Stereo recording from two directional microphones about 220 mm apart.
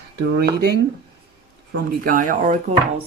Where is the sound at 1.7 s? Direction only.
40° right (ahead or behind).